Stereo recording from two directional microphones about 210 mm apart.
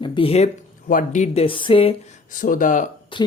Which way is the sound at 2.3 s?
40° left (ahead or behind).